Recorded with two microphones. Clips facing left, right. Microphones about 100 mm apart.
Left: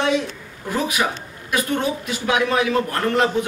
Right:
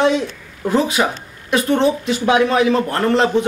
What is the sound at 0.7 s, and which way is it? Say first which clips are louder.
A man's voice: right 5 dB; 25° right (ahead or behind).